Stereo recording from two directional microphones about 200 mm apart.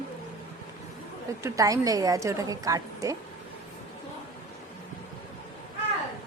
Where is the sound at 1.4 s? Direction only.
15° right (ahead or behind).